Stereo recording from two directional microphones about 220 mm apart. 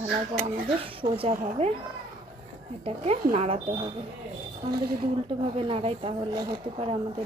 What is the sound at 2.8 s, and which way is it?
Speech, 25° right (ahead or behind).